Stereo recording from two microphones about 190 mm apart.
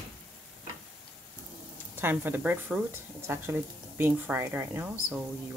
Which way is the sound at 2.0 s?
10° right (ahead or behind).